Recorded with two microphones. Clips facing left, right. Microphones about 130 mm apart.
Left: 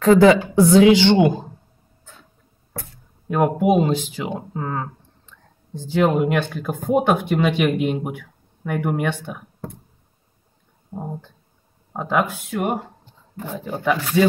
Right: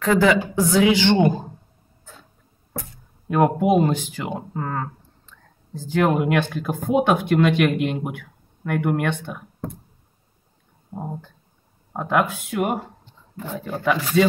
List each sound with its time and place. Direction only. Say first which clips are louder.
0.0 s speech: left 5 dB; 35° left (ahead or behind)
3.3 s speech: even; centre (ahead or behind)
6.1 s speech: left 1 dB; centre (ahead or behind)
11.9 s speech: even; centre (ahead or behind)
13.8 s speech: even; centre (ahead or behind)